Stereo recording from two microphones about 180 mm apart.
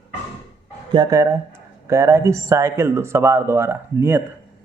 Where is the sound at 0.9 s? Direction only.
20° right (ahead or behind).